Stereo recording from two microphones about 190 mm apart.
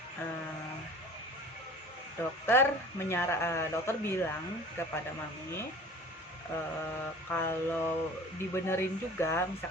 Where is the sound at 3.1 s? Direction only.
15° left (ahead or behind).